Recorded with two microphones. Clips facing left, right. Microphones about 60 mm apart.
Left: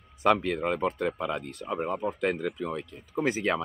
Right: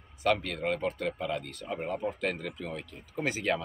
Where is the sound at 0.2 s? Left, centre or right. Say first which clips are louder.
Left 4 dB; left.